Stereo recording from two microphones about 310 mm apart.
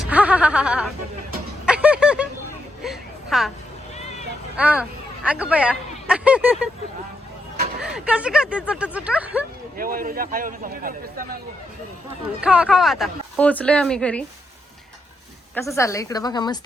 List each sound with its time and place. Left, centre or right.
0.0 s music: centre
2.8 s a sound: centre
4.5 s speech: centre
7.8 s a woman's voice: centre
9.7 s a man's voice: right
12.4 s a woman's voice: centre
15.5 s a woman's voice: centre